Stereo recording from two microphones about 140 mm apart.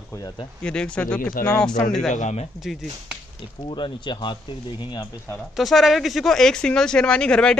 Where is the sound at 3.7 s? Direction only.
35° left (ahead or behind).